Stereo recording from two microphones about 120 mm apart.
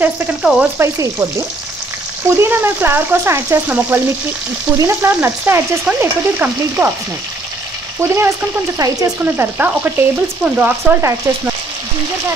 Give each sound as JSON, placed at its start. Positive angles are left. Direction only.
{"t": 0.0, "sound": "frying", "side_deg": -5}
{"t": 0.7, "sound": "frying", "side_deg": -25}
{"t": 2.2, "sound": "frying", "side_deg": -20}
{"t": 8.0, "sound": "frying", "side_deg": -20}
{"t": 8.7, "sound": "speech", "side_deg": -30}
{"t": 9.2, "sound": "frying", "side_deg": -15}
{"t": 11.0, "sound": "frying", "side_deg": -25}